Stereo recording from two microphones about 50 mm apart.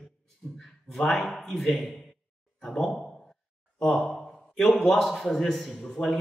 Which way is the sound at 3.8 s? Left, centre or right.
Centre.